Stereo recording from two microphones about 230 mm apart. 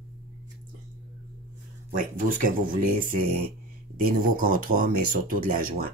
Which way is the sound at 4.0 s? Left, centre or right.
Right.